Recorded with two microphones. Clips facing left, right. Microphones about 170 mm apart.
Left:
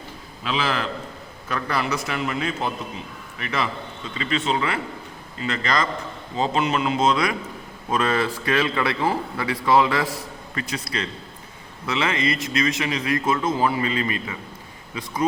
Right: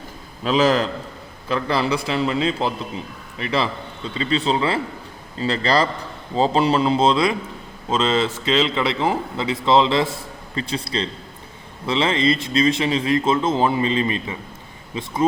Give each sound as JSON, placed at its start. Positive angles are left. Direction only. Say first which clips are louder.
{"t": 0.4, "sound": "a man's voice", "louder": "right 8 dB", "side_deg": -40}
{"t": 1.5, "sound": "a man's voice", "louder": "right 4 dB", "side_deg": -25}